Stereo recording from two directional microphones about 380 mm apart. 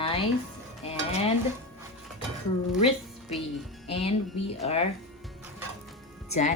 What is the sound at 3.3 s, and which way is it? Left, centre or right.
Speech, centre.